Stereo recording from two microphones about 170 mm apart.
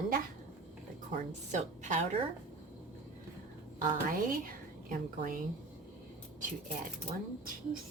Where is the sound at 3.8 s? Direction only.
55° right (ahead or behind).